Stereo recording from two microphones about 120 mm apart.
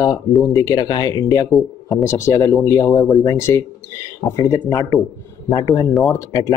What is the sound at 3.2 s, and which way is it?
Speech, 25° left (ahead or behind).